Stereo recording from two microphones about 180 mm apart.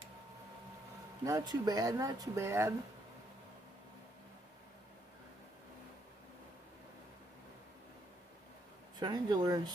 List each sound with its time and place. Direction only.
1.2 s speech: 20° right (ahead or behind)
9.0 s speech: 25° right (ahead or behind)